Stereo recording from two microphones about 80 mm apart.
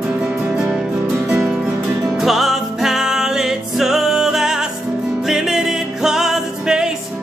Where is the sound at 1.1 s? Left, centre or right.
Centre.